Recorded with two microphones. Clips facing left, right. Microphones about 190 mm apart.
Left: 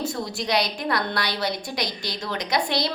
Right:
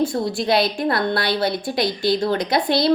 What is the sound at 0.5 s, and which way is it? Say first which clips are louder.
A woman's voice: right 4 dB; 30° right (ahead or behind).